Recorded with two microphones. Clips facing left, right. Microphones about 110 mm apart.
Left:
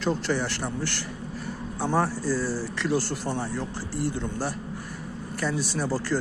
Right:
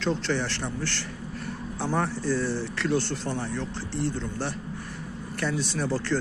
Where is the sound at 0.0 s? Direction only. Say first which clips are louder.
Left 1 dB; 10° left (ahead or behind).